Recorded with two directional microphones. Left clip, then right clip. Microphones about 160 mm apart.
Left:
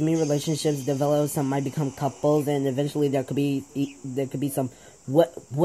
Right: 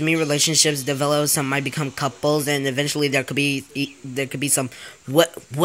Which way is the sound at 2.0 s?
65° right (ahead or behind).